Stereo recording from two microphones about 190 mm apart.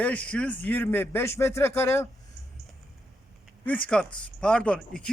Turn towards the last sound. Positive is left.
turn(degrees=5)  # may be behind; listen again after turning